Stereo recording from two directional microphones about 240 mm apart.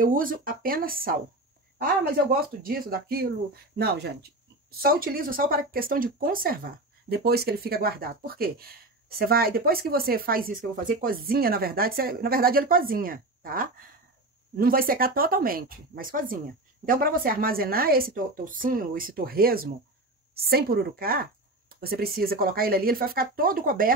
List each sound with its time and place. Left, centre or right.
0.0 s speech: right